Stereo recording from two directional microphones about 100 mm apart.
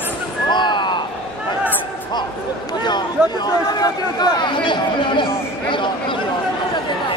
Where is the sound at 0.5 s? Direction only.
50° left (ahead or behind).